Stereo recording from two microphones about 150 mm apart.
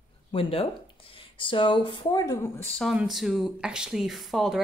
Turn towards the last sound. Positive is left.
turn(degrees=0)  # may be behind; listen again after turning